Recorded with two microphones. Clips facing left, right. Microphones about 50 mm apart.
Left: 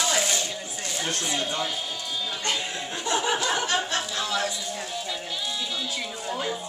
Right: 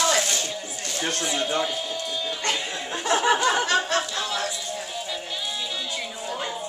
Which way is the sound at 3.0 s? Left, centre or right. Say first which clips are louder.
Right 5 dB; right.